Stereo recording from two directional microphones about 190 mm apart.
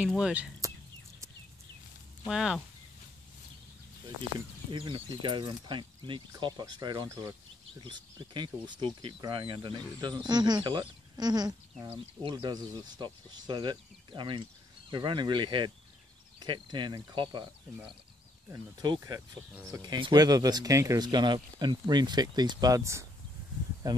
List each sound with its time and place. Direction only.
0.0 s speech: 5° right (ahead or behind)
2.2 s speech: centre (ahead or behind)
4.6 s speech: 25° right (ahead or behind)